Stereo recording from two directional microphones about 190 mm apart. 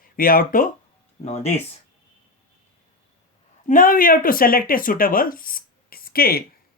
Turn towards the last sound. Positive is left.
turn(degrees=50)  # may be behind; listen again after turning